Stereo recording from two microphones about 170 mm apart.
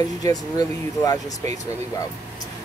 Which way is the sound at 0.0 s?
20° left (ahead or behind).